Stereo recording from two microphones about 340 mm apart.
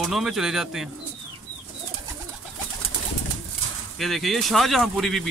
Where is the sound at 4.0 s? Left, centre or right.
Centre.